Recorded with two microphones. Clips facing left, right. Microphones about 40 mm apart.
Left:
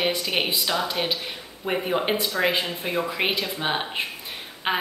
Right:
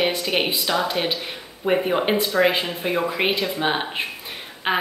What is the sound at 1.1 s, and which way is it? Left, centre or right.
A woman's voice, centre.